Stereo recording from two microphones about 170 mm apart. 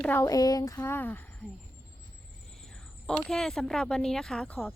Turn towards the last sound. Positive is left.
turn(degrees=10)  # may be behind; listen again after turning